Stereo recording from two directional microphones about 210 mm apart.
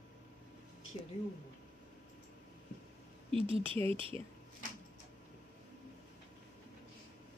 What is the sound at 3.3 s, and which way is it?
Speech, 25° right (ahead or behind).